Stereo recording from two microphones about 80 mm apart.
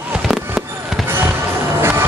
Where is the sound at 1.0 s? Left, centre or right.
Right.